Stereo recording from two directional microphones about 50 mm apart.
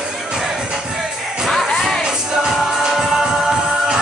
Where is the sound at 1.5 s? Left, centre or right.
Centre.